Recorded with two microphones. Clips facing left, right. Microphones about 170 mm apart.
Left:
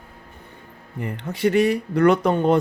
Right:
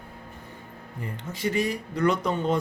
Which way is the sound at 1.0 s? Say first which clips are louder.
Left 8 dB; 65° left (ahead or behind).